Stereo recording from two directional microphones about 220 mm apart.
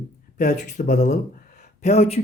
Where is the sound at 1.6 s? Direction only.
30° left (ahead or behind).